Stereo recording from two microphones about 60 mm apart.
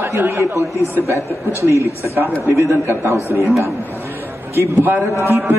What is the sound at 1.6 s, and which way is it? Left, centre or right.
Speech, right.